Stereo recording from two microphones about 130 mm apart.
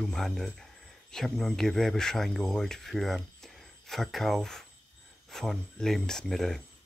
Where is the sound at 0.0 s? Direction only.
Centre (ahead or behind).